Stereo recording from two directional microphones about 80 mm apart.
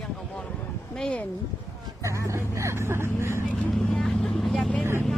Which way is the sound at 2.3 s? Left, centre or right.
Right.